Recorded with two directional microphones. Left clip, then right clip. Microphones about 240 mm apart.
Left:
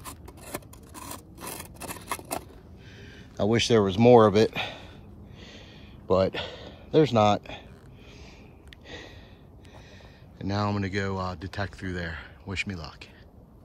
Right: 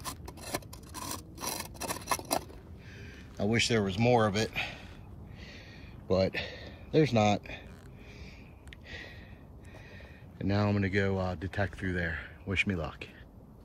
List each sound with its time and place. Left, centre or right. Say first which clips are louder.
1.6 s scissors: right 2 dB; centre
3.3 s speech: left 7 dB; centre
6.0 s speech: left 5 dB; centre
8.8 s a sound: left 2 dB; centre
10.4 s speech: left 2 dB; centre